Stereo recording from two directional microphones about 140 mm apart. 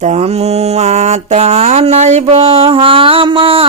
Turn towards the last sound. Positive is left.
turn(degrees=-40)  # may be behind; listen again after turning